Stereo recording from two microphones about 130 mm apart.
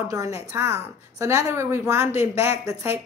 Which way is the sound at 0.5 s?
20° right (ahead or behind).